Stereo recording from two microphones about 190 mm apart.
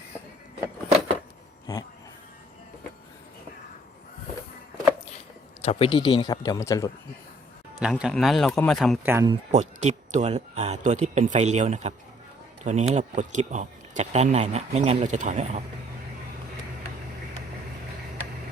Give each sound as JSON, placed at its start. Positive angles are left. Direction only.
{"t": 5.6, "sound": "speech", "side_deg": 30}
{"t": 7.8, "sound": "speech", "side_deg": -5}
{"t": 9.0, "sound": "speech", "side_deg": -15}
{"t": 9.5, "sound": "speech", "side_deg": -35}